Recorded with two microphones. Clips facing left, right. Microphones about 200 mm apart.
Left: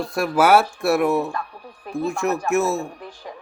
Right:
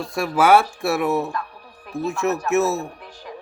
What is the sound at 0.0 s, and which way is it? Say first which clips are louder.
Speech: left 1 dB; centre (ahead or behind).